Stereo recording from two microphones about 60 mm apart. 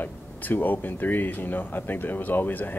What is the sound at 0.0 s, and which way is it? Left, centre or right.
Speech, left.